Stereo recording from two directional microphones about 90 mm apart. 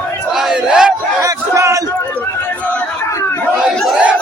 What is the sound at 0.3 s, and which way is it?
Battle cry, 5° right (ahead or behind).